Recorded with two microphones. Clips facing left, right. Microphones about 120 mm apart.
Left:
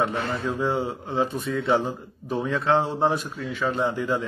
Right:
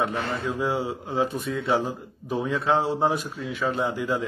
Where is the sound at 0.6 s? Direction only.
5° right (ahead or behind).